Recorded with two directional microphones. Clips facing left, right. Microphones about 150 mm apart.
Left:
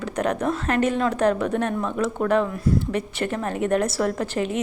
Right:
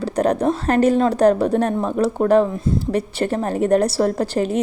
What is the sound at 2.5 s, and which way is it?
Speech, 25° right (ahead or behind).